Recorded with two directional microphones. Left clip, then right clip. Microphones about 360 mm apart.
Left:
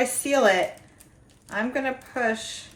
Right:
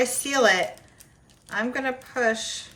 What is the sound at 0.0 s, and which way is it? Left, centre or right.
A woman's voice, centre.